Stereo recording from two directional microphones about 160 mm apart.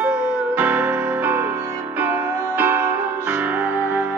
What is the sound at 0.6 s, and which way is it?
Music, 10° right (ahead or behind).